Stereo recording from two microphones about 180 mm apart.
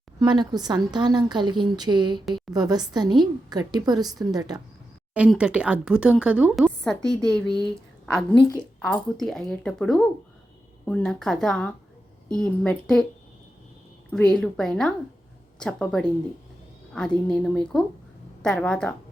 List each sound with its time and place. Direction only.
0.2 s a woman's voice: 25° right (ahead or behind)
5.1 s speech: 5° right (ahead or behind)
14.1 s speech: 5° left (ahead or behind)